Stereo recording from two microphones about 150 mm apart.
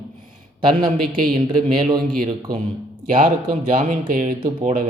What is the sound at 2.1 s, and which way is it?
Speech, 75° right (ahead or behind).